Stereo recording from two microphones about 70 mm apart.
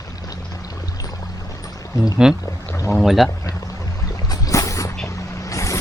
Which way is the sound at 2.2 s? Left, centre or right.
Centre.